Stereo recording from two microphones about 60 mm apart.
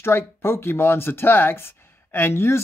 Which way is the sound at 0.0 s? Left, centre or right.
Left.